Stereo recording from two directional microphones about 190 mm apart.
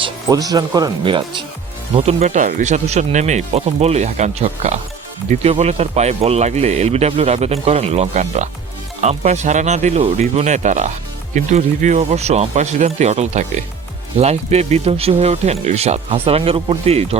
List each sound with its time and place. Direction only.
0.0 s speech: 20° right (ahead or behind)